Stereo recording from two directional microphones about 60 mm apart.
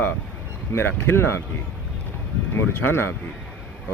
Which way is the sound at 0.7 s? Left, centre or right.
Left.